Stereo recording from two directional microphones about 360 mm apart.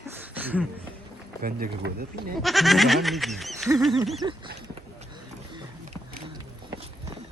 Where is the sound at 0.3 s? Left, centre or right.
Centre.